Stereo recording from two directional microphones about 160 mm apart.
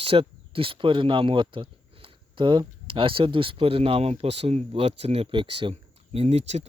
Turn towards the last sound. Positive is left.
turn(degrees=-45)  # may be behind; listen again after turning